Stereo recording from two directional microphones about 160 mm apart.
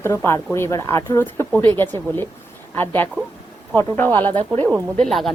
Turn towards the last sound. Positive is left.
turn(degrees=0)  # may be behind; listen again after turning